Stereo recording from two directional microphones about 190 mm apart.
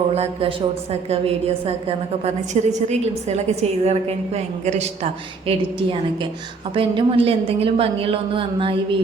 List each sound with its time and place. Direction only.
1.1 s a woman's voice: 30° right (ahead or behind)